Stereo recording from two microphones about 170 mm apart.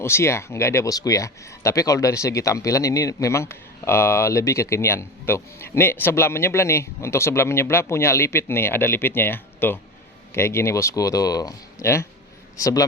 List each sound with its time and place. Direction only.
0.0 s a man's voice: 15° left (ahead or behind)